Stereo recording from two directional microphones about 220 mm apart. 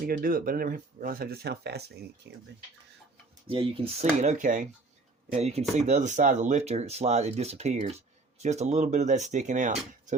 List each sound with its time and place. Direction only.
0.0 s speech: 40° right (ahead or behind)
3.4 s speech: 25° right (ahead or behind)